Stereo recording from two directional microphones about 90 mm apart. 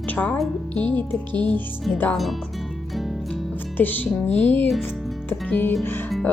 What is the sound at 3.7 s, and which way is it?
Speech, 20° left (ahead or behind).